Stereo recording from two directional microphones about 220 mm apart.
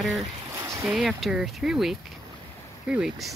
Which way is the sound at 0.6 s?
10° right (ahead or behind).